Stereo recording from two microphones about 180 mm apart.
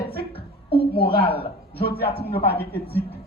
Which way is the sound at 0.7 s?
30° left (ahead or behind).